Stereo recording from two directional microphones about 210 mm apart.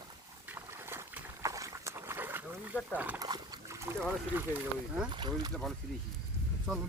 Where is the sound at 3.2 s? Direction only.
20° right (ahead or behind).